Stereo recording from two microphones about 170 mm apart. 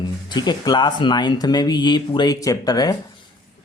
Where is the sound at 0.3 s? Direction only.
25° left (ahead or behind).